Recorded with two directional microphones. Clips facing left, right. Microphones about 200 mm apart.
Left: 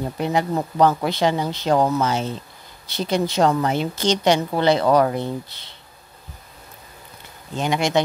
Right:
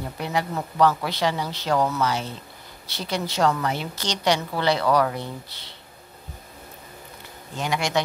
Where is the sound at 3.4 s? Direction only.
25° left (ahead or behind).